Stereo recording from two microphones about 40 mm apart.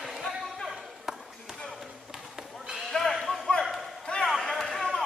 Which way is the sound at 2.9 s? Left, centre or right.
Centre.